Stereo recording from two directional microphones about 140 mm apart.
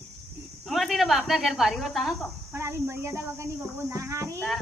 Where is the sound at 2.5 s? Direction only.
20° right (ahead or behind).